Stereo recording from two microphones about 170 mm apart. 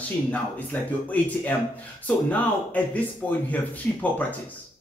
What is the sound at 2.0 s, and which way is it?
Speech, 10° left (ahead or behind).